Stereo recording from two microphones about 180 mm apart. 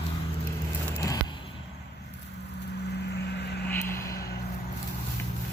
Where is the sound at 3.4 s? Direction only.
65° left (ahead or behind).